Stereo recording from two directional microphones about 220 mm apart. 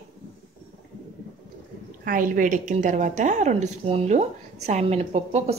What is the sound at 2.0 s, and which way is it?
A woman's voice, 40° right (ahead or behind).